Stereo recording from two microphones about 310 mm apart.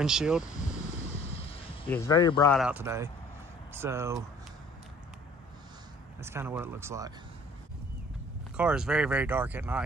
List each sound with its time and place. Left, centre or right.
0.0 s speech: centre
1.2 s a sound: centre
1.9 s a man's voice: centre
2.5 s speech: centre
6.2 s speech: centre
8.5 s speech: centre